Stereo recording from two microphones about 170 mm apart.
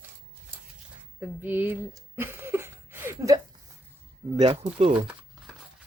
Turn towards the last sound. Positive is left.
turn(degrees=-35)  # may be behind; listen again after turning